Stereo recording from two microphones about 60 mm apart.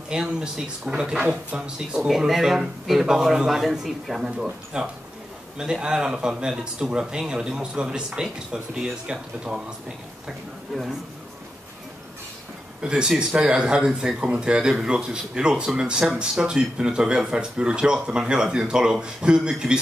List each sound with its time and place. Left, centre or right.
0.1 s speech: centre
1.3 s speech: right
2.0 s speech: centre
12.8 s speech: centre